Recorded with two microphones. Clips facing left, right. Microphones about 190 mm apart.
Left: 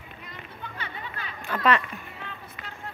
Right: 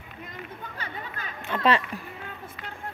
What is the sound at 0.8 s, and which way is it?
Chatter, 40° right (ahead or behind).